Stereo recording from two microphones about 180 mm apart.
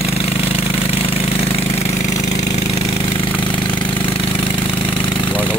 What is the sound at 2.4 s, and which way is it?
Jackhammer, 40° left (ahead or behind).